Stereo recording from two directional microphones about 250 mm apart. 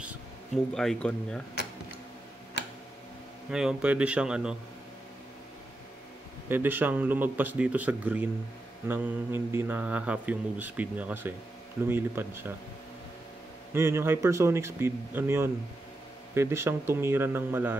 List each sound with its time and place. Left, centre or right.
0.7 s a man's voice: centre
2.6 s tick-tock: left
3.4 s a man's voice: centre
6.5 s speech: centre
13.7 s speech: centre